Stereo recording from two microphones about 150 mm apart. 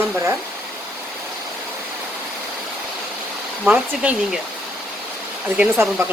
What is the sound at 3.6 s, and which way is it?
Speech, 5° right (ahead or behind).